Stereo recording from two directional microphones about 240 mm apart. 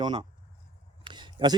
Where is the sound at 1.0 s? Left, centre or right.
Centre.